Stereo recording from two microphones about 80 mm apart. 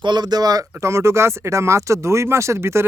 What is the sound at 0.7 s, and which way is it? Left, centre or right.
Speech, right.